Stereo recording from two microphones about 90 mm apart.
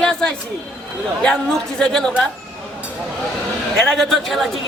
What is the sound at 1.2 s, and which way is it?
Speech, 10° left (ahead or behind).